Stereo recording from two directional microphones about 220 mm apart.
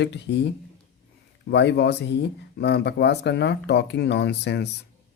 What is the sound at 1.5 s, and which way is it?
Speech, 50° left (ahead or behind).